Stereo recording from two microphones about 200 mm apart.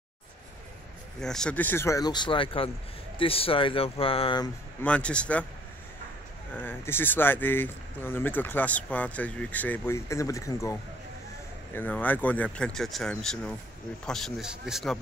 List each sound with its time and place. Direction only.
1.2 s speech: 5° left (ahead or behind); by 4.5 s 25° left (ahead or behind)
4.8 s speech: 5° left (ahead or behind)
6.5 s speech: 10° left (ahead or behind)